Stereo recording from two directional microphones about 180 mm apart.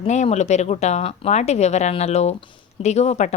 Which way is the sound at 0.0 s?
35° left (ahead or behind).